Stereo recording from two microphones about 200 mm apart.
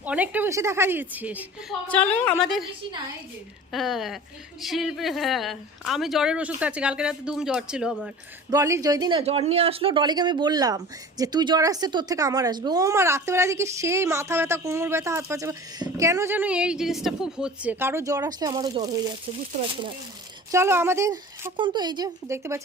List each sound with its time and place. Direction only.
0.0 s speech: 5° right (ahead or behind)
1.9 s a woman's voice: 5° left (ahead or behind)
3.7 s speech: centre (ahead or behind)
8.4 s speech: 15° right (ahead or behind)
20.5 s speech: 10° right (ahead or behind)